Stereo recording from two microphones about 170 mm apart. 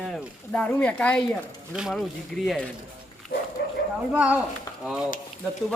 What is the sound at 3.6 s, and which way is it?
Speech, 70° left (ahead or behind).